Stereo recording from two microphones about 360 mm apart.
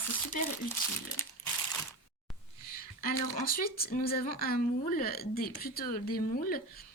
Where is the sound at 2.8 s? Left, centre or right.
Left.